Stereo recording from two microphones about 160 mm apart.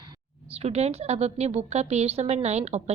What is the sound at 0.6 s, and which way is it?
A woman's voice, 40° right (ahead or behind).